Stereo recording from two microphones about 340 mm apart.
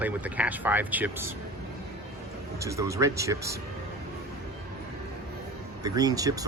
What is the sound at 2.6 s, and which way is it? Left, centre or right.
Speech, centre.